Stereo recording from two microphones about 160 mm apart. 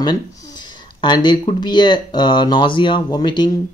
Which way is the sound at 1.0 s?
30° left (ahead or behind).